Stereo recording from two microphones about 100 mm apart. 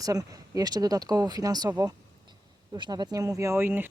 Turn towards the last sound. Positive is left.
turn(degrees=-20)  # may be behind; listen again after turning